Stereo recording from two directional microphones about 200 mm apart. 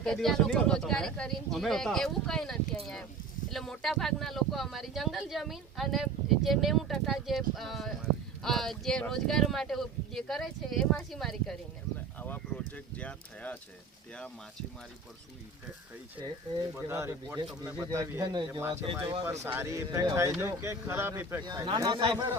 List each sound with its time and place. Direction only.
0.0 s speech: centre (ahead or behind)
16.7 s speech: 15° right (ahead or behind)